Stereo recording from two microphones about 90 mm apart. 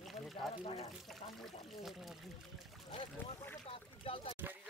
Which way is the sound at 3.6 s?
85° left.